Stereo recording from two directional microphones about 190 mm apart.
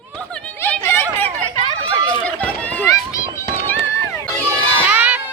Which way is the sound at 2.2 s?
5° left (ahead or behind).